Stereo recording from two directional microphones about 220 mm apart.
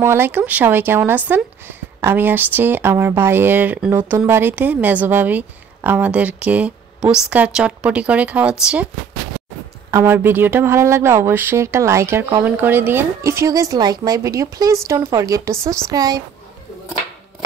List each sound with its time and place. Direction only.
0.0 s a woman's voice: 10° right (ahead or behind)
9.8 s speech: 10° right (ahead or behind)